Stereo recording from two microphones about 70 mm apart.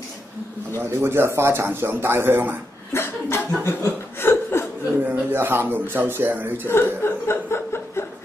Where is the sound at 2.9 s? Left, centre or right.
Left.